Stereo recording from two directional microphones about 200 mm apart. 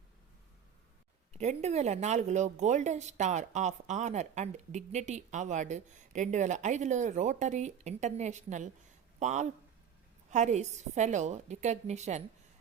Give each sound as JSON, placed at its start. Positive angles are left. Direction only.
{"t": 1.3, "sound": "a woman's voice", "side_deg": -35}